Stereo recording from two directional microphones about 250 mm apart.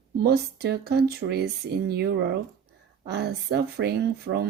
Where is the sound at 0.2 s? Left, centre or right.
Right.